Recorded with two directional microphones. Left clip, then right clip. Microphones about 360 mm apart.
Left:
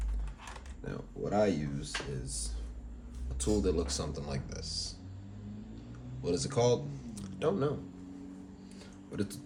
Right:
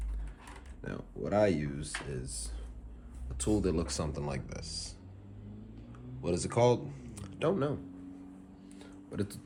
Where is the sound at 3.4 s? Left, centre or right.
Right.